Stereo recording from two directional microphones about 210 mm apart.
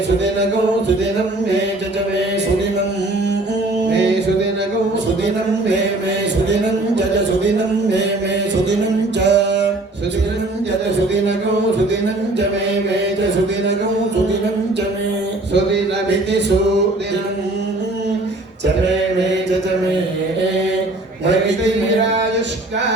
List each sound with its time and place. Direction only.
9.2 s music: 55° right (ahead or behind)